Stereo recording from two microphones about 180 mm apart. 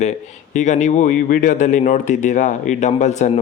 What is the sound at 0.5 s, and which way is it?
Speech, 40° left (ahead or behind).